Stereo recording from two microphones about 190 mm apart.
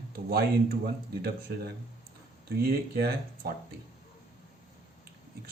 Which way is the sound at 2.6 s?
55° right (ahead or behind).